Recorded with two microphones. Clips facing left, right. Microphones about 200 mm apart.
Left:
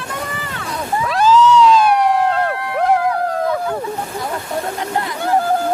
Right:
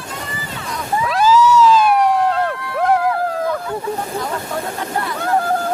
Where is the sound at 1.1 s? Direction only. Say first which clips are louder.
Left 1 dB; 5° right (ahead or behind).